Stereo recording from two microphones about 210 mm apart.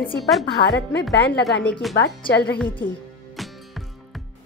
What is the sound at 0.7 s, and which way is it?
Speech, 55° left (ahead or behind).